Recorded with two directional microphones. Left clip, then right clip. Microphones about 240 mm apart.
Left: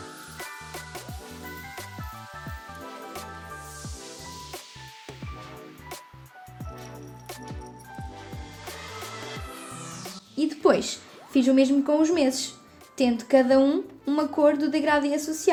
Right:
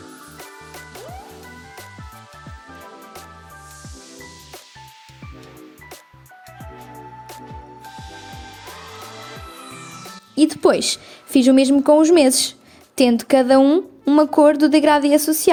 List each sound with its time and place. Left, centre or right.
10.3 s a woman's voice: right